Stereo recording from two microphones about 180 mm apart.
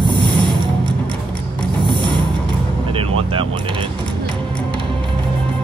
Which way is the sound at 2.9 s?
30° right (ahead or behind).